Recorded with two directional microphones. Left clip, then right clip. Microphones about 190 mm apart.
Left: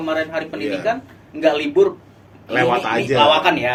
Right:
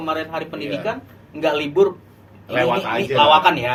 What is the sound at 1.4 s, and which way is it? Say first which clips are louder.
Speech: left 2 dB; 15° left (ahead or behind).